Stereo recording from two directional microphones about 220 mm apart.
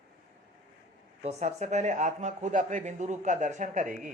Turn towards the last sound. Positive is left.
turn(degrees=-35)  # may be behind; listen again after turning